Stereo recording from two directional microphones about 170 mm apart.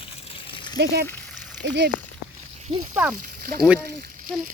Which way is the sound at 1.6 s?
90° right.